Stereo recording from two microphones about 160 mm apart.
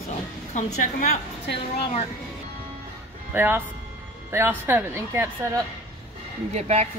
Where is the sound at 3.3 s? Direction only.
15° right (ahead or behind).